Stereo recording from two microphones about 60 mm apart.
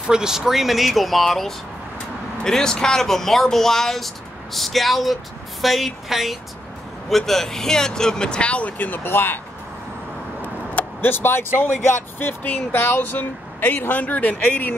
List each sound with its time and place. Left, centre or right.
0.0 s speech: centre; by 9.4 s left
10.4 s speech: left